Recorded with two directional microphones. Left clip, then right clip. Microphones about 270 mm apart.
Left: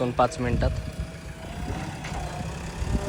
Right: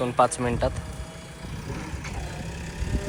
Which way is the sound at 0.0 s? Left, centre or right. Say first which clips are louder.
Right 2 dB; centre.